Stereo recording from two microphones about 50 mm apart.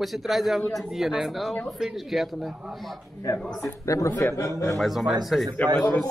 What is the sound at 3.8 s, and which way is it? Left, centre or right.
Speech, left.